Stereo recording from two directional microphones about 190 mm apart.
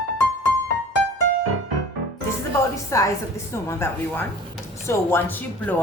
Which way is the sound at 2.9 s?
15° left (ahead or behind).